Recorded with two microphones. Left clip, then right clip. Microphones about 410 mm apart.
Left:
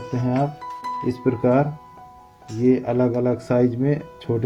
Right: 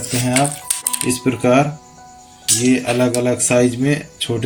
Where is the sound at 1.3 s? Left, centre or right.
Left.